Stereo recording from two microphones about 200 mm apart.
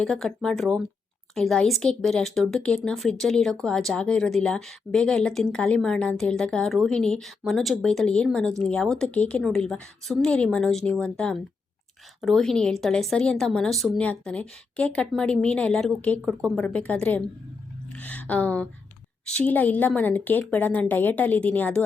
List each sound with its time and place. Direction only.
0.0 s a woman's voice: 5° left (ahead or behind)